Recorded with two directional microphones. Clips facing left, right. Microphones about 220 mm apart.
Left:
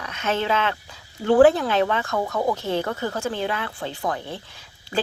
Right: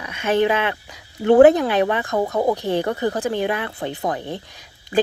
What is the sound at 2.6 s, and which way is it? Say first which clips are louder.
A woman's voice: right 4 dB; 15° right (ahead or behind).